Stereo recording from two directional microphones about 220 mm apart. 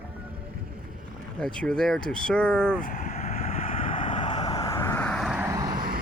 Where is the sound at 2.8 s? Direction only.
35° left (ahead or behind).